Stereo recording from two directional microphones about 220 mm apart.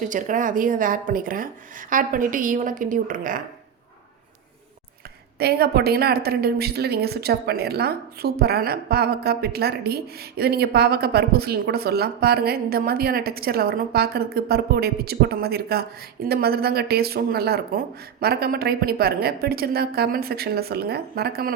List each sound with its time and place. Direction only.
0.0 s a woman's voice: 35° right (ahead or behind)
5.4 s a woman's voice: 45° right (ahead or behind)